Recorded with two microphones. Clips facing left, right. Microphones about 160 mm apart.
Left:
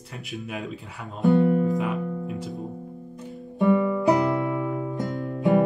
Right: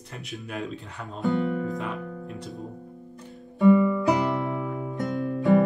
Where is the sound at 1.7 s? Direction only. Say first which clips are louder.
Left 6 dB; 5° left (ahead or behind).